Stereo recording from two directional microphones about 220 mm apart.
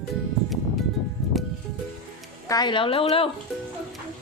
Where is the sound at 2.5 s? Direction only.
20° left (ahead or behind).